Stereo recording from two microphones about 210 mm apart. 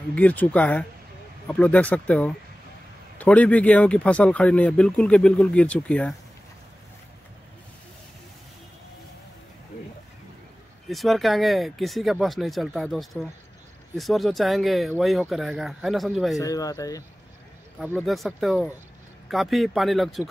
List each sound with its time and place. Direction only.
0.1 s speech: 5° left (ahead or behind)
10.9 s speech: centre (ahead or behind)
16.3 s speech: 15° left (ahead or behind)
17.9 s speech: centre (ahead or behind)